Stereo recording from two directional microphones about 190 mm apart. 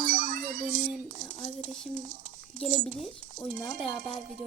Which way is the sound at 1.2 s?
5° left (ahead or behind).